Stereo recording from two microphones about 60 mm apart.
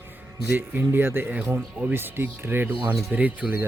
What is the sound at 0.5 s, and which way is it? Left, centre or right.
Speech, right.